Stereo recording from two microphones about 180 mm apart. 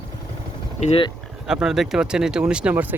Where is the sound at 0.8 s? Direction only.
35° left (ahead or behind).